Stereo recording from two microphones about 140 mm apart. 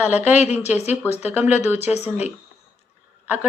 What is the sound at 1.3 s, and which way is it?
Speech, 15° right (ahead or behind).